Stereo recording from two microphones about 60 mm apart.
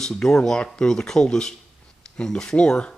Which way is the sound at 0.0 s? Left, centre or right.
Centre.